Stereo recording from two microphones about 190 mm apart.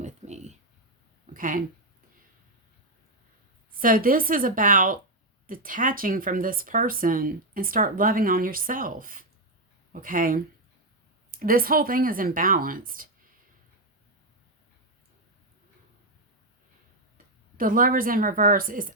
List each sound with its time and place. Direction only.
0.0 s a sound: 35° right (ahead or behind)
1.3 s speech: 45° right (ahead or behind)
3.8 s speech: 50° right (ahead or behind)
17.6 s speech: 45° right (ahead or behind)